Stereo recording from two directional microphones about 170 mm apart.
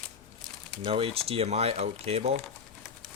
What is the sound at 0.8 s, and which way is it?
Speech, 35° right (ahead or behind).